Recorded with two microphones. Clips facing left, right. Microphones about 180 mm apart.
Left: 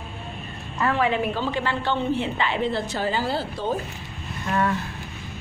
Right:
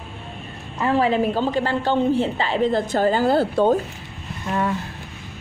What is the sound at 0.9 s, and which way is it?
A woman's voice, 35° right (ahead or behind).